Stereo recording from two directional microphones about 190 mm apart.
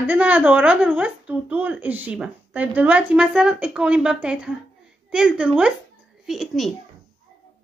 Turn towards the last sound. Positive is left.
turn(degrees=0)  # may be behind; listen again after turning